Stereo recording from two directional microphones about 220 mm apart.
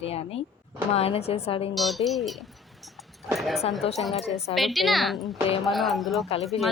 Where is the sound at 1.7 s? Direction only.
Centre (ahead or behind).